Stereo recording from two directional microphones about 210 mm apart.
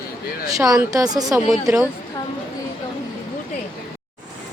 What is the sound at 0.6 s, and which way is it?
Speech, 15° right (ahead or behind).